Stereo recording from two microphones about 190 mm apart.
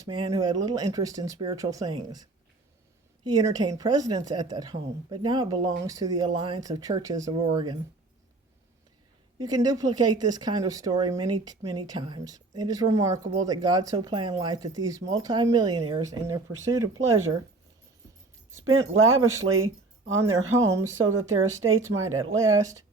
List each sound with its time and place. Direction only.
0.0 s speech: 20° right (ahead or behind)
3.2 s speech: 20° right (ahead or behind)
9.4 s speech: 20° right (ahead or behind)
18.6 s speech: 90° right
20.7 s speech: 15° right (ahead or behind)
21.0 s speech: 90° right